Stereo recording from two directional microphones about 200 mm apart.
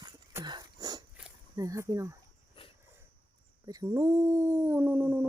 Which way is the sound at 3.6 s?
15° right (ahead or behind).